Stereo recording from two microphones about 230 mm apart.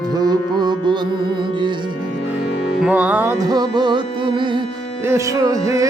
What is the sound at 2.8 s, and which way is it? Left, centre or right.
Music, centre.